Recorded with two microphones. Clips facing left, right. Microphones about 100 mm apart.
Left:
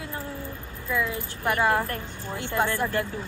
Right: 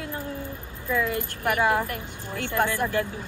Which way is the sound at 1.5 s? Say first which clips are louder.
Even; 15° right (ahead or behind).